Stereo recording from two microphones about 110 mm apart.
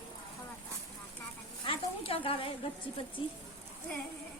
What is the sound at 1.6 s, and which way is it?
Speech, 55° left (ahead or behind).